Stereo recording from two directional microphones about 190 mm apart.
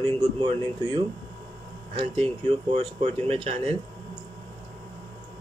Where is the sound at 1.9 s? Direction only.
25° right (ahead or behind).